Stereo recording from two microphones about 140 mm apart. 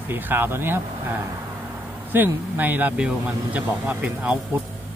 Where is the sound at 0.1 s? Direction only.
15° right (ahead or behind).